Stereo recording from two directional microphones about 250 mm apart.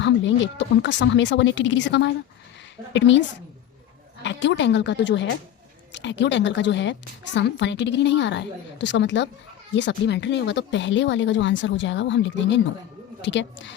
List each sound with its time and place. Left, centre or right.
0.0 s speech: left